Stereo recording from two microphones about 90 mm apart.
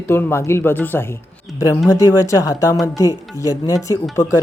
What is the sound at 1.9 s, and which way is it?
Speech, 40° left (ahead or behind).